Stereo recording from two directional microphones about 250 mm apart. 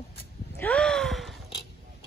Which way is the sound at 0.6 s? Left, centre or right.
Centre.